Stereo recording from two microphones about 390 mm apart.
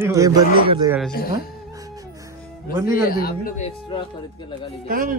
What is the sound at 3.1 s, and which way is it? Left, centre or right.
Speech, left.